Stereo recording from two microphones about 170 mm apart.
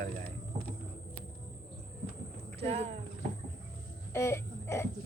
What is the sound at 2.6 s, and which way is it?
Speech, 35° right (ahead or behind).